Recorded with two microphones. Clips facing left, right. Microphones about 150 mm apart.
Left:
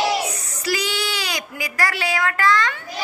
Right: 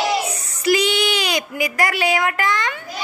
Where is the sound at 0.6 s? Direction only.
20° right (ahead or behind).